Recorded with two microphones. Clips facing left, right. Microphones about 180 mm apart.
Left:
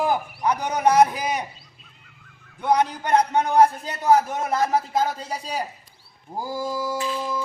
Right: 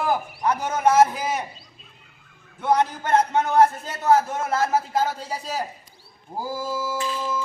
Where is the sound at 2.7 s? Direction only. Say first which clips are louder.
Even; 15° left (ahead or behind).